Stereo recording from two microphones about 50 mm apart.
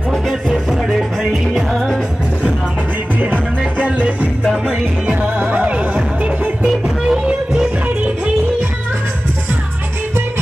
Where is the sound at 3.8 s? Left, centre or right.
Right.